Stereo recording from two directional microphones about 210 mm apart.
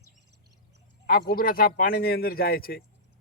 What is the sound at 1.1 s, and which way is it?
Speech, 45° left (ahead or behind).